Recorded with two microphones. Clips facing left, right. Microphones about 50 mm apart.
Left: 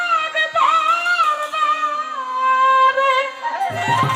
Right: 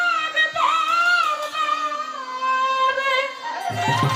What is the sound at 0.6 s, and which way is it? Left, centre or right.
Music, left.